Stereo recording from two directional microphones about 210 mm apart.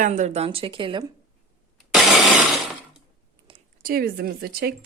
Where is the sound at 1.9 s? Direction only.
Centre (ahead or behind).